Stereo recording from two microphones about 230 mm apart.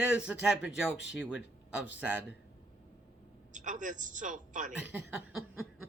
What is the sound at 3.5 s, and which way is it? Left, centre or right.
A man's voice, right.